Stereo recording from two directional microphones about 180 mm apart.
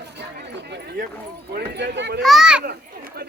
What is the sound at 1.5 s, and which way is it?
Speech, 65° right (ahead or behind).